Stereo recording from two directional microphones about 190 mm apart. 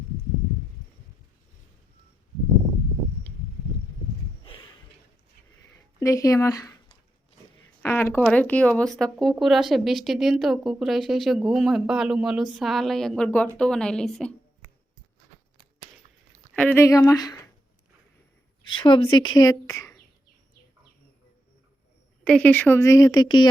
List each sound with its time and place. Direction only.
4.4 s a sound: 25° left (ahead or behind)
5.6 s a sound: 15° left (ahead or behind)
7.8 s speech: 10° left (ahead or behind)
16.6 s speech: 10° left (ahead or behind)
18.7 s speech: 25° left (ahead or behind)
22.2 s speech: 5° left (ahead or behind); by 23.5 s 20° left (ahead or behind)